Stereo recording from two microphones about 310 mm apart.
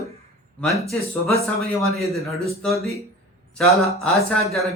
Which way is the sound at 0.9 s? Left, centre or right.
Centre.